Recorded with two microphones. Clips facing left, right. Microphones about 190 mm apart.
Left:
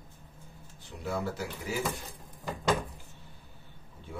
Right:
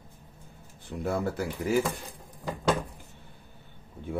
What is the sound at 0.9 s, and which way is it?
Speech, 55° right (ahead or behind).